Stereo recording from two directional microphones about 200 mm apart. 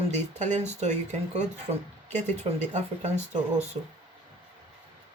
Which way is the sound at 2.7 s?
35° right (ahead or behind).